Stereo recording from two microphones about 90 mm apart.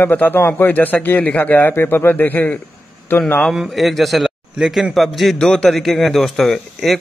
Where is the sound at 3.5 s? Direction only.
Centre (ahead or behind).